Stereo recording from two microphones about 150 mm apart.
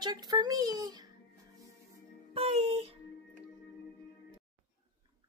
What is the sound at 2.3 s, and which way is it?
Music, 40° right (ahead or behind).